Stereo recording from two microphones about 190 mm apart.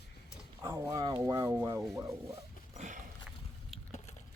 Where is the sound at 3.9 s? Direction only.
40° left (ahead or behind).